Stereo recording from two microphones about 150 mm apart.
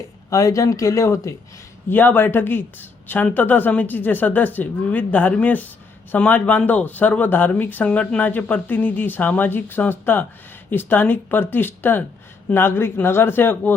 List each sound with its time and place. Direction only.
0.3 s speech: 20° left (ahead or behind)